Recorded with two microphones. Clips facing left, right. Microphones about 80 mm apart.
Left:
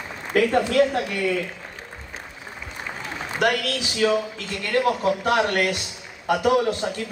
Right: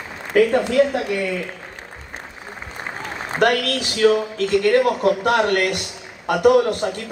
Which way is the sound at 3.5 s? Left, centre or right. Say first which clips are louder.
Right 3 dB; right.